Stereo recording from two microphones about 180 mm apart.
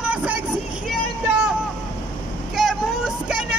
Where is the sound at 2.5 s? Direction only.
Centre (ahead or behind).